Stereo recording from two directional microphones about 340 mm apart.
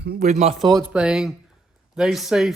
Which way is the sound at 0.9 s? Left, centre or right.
Centre.